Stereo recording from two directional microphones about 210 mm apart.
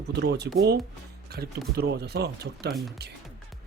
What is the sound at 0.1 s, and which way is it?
Speech, 55° right (ahead or behind).